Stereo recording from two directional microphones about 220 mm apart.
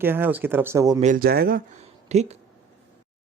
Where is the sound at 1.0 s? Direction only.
40° right (ahead or behind).